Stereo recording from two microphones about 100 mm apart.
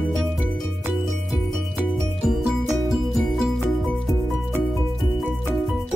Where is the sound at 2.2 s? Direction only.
Centre (ahead or behind).